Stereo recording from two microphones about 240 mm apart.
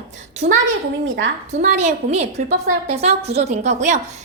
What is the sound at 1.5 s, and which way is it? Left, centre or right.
A woman's voice, right.